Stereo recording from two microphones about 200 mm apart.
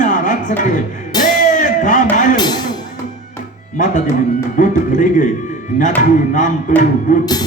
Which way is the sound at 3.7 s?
40° left (ahead or behind).